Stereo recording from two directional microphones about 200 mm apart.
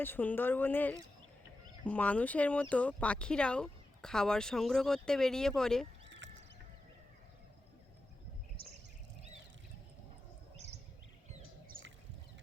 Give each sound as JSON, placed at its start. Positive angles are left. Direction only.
{"t": 0.0, "sound": "speech", "side_deg": 10}
{"t": 6.1, "sound": "music", "side_deg": -65}